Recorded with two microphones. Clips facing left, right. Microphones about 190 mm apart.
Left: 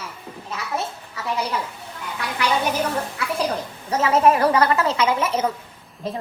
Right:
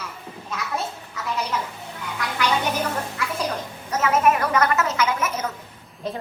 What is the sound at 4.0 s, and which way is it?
A woman's voice, 30° left (ahead or behind).